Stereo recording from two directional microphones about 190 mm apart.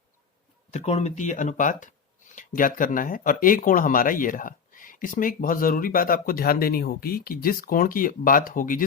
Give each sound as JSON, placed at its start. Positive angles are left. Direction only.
{"t": 0.7, "sound": "speech", "side_deg": 35}